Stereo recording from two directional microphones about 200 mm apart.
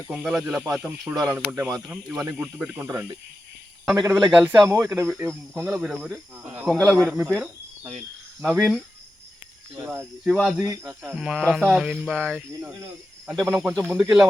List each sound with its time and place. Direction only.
0.1 s speech: 5° right (ahead or behind)
8.4 s speech: centre (ahead or behind)
10.2 s speech: centre (ahead or behind)
13.5 s speech: 10° right (ahead or behind)